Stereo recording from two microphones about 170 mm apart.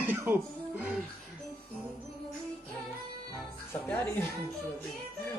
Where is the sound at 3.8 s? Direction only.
10° left (ahead or behind).